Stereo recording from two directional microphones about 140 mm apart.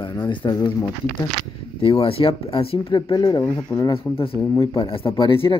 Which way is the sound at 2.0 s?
40° left (ahead or behind).